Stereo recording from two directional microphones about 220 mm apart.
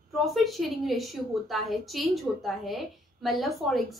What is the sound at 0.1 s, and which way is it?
A woman's voice, centre (ahead or behind).